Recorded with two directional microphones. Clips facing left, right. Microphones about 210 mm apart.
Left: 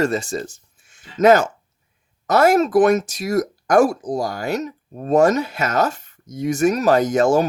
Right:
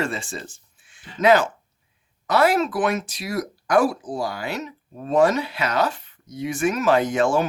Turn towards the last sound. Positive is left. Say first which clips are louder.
# left 4 dB
turn(degrees=40)  # may be behind; listen again after turning